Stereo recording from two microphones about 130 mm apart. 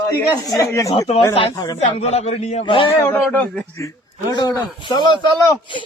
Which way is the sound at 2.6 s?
40° left (ahead or behind).